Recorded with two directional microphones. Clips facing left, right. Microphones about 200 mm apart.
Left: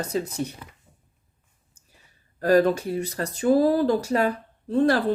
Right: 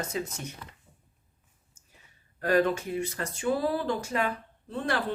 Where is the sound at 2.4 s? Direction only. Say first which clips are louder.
Left 6 dB; 40° left (ahead or behind).